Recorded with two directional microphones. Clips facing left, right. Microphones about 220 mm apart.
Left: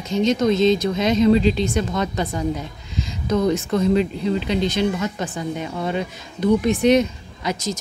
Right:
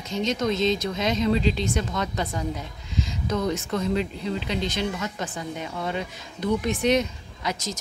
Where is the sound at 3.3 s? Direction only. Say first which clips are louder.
Left 7 dB; 25° left (ahead or behind).